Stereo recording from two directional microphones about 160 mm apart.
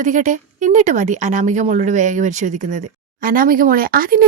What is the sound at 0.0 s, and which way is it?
Speech, 50° right (ahead or behind).